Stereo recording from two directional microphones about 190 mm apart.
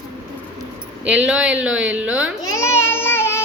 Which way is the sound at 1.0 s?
5° right (ahead or behind).